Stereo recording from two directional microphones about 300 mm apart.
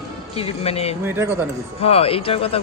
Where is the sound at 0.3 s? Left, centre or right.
Centre.